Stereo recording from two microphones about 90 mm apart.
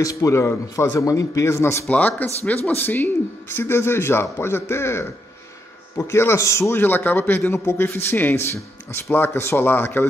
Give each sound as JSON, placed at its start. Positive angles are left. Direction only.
{"t": 0.0, "sound": "a man's voice", "side_deg": 35}
{"t": 1.9, "sound": "a man's voice", "side_deg": 20}
{"t": 6.8, "sound": "a man's voice", "side_deg": 20}